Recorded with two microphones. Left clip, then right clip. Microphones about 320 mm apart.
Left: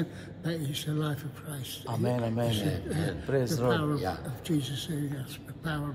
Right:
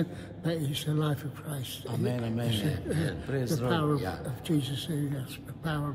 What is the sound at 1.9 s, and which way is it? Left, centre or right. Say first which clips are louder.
A man's voice: left 3 dB; centre.